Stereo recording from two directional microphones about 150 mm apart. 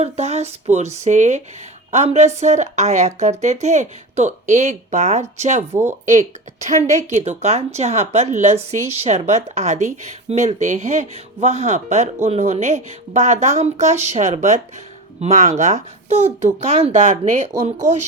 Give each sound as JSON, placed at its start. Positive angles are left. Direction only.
{"t": 0.0, "sound": "speech", "side_deg": -45}
{"t": 5.7, "sound": "speech", "side_deg": -15}
{"t": 6.1, "sound": "speech", "side_deg": -55}